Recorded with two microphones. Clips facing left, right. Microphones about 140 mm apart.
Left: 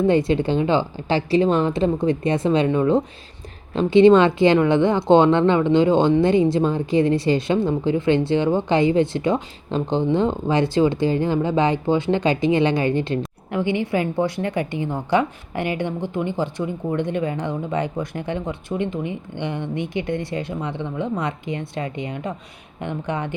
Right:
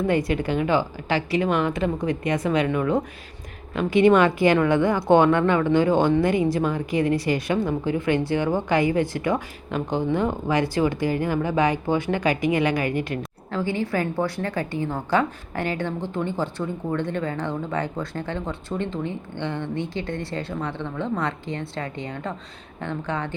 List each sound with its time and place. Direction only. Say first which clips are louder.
0.1 s a woman's voice: left 4 dB; 25° left (ahead or behind)